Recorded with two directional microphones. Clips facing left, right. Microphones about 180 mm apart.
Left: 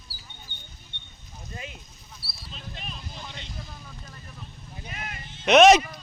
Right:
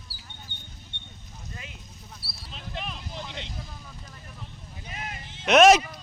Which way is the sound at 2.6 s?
70° right (ahead or behind).